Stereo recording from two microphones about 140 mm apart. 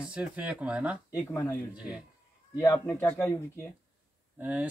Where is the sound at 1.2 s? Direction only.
15° left (ahead or behind).